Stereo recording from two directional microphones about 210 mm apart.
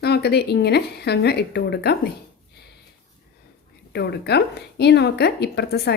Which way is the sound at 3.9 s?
50° left (ahead or behind).